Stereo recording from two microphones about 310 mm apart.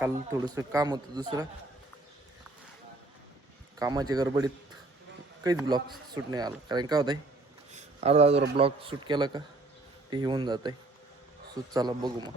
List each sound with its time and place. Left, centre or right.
0.0 s speech: centre
3.8 s a man's voice: centre
7.7 s a sound: right
8.5 s speech: centre